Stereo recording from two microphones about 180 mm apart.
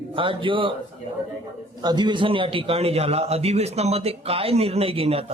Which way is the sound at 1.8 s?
25° right (ahead or behind).